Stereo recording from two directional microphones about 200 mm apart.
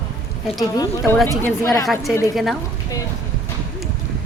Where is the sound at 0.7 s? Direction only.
20° left (ahead or behind).